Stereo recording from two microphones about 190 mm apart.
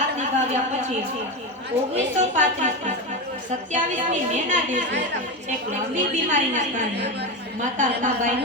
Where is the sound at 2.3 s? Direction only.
40° right (ahead or behind).